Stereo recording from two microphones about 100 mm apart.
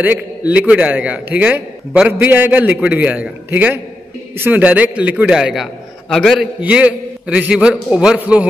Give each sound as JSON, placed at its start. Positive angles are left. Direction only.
{"t": 0.0, "sound": "a man's voice", "side_deg": -15}
{"t": 6.4, "sound": "a man's voice", "side_deg": -10}